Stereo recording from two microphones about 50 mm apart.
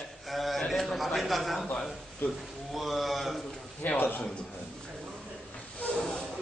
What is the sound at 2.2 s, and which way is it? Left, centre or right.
Speech, left.